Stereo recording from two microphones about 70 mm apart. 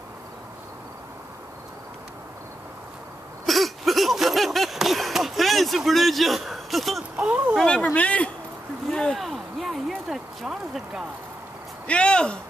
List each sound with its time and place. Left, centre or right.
3.4 s a sound: centre
7.2 s speech: centre
7.6 s speech: centre
8.9 s speech: centre
11.9 s speech: centre